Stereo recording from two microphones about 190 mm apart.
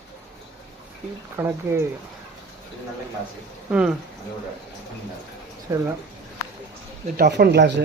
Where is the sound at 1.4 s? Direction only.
15° right (ahead or behind).